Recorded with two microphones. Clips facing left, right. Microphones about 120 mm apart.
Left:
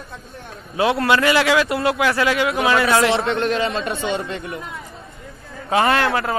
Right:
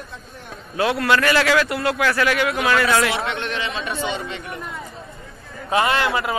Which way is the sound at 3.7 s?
55° left (ahead or behind).